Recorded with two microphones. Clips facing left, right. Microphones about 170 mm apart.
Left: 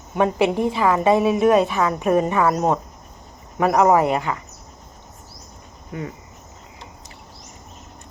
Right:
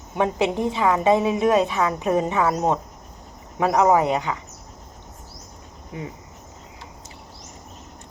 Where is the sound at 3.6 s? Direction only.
50° left (ahead or behind).